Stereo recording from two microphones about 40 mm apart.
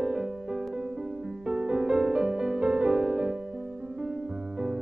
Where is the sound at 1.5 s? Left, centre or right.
Right.